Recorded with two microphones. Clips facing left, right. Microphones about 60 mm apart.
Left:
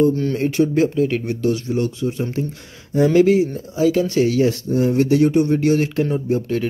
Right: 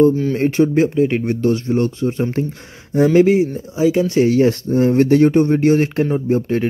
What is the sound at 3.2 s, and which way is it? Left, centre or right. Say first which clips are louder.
Speech: right 1 dB; right.